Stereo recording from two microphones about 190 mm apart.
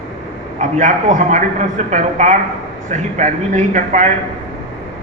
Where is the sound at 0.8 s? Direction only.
40° right (ahead or behind).